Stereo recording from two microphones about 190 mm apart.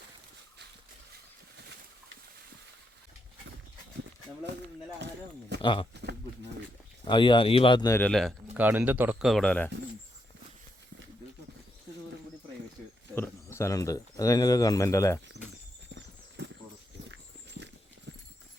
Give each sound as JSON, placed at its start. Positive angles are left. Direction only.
{"t": 5.6, "sound": "speech", "side_deg": 25}
{"t": 5.9, "sound": "a sound", "side_deg": -65}
{"t": 7.0, "sound": "speech", "side_deg": 25}
{"t": 8.5, "sound": "speech", "side_deg": -10}
{"t": 13.1, "sound": "speech", "side_deg": 10}
{"t": 17.1, "sound": "horse", "side_deg": -65}